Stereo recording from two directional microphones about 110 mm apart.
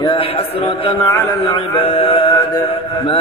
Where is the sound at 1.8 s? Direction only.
65° left (ahead or behind).